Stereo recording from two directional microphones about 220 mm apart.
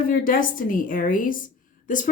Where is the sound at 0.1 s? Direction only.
40° left (ahead or behind).